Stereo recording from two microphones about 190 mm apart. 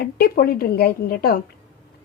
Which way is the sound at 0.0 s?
55° left (ahead or behind).